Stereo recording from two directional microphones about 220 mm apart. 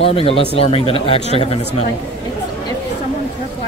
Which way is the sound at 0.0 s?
25° left (ahead or behind).